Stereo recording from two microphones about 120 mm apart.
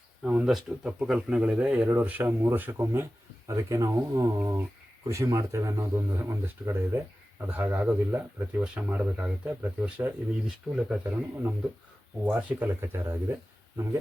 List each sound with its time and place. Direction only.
0.2 s speech: 10° right (ahead or behind)